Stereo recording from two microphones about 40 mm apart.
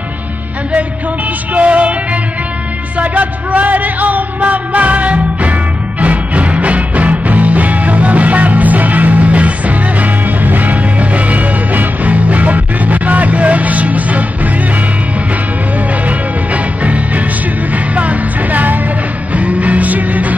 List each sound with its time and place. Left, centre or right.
1.5 s music: right
3.0 s music: right
16.1 s music: right